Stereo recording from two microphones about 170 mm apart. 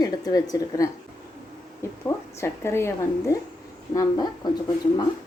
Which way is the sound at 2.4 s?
15° left (ahead or behind).